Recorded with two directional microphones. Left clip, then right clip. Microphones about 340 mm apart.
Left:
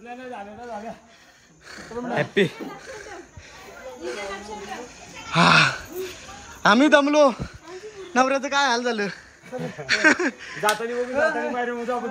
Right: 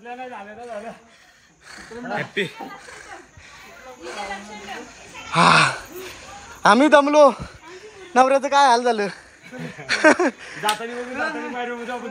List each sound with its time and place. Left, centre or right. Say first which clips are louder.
1.7 s speech: even; centre
2.1 s speech: left 3 dB; left
4.0 s a man's voice: right 1 dB; centre
11.1 s speech: left 5 dB; left